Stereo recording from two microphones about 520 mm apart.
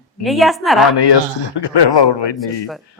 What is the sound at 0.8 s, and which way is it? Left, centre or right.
A man's voice, left.